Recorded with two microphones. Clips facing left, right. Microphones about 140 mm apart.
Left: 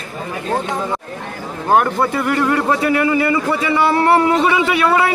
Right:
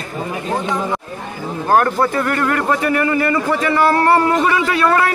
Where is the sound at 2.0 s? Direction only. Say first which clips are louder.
Even; 10° left (ahead or behind).